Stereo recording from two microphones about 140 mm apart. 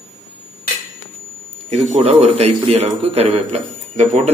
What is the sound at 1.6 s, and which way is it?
A man's voice, 45° right (ahead or behind).